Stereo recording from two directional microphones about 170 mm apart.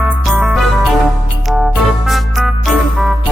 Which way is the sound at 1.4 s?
Centre (ahead or behind).